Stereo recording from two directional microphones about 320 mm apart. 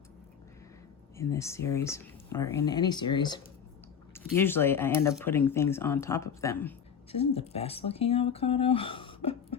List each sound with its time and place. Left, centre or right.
1.2 s speech: centre
7.1 s speech: centre